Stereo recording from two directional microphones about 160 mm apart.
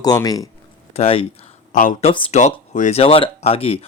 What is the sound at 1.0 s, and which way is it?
Speech, 35° left (ahead or behind).